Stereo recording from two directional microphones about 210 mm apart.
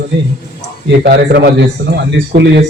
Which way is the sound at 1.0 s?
45° right (ahead or behind).